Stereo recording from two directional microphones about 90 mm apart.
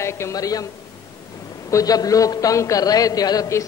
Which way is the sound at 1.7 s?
40° left (ahead or behind).